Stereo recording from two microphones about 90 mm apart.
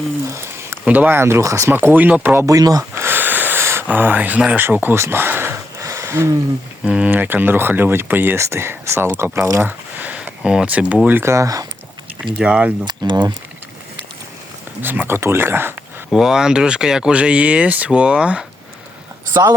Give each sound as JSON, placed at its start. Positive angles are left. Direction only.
{"t": 0.3, "sound": "a sound", "side_deg": -30}
{"t": 0.9, "sound": "speech", "side_deg": -20}
{"t": 1.7, "sound": "speech", "side_deg": -20}
{"t": 2.5, "sound": "speech", "side_deg": -40}
{"t": 3.0, "sound": "a sound", "side_deg": -25}
{"t": 4.4, "sound": "speech", "side_deg": -10}
{"t": 4.6, "sound": "a sound", "side_deg": -20}
{"t": 6.8, "sound": "speech", "side_deg": -15}
{"t": 11.2, "sound": "speech", "side_deg": -35}
{"t": 12.2, "sound": "speech", "side_deg": -10}
{"t": 12.8, "sound": "speech", "side_deg": -55}
{"t": 14.8, "sound": "speech", "side_deg": -25}
{"t": 16.1, "sound": "speech", "side_deg": -5}
{"t": 19.3, "sound": "speech", "side_deg": -50}